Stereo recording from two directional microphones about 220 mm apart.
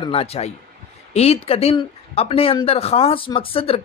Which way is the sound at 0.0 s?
25° left (ahead or behind).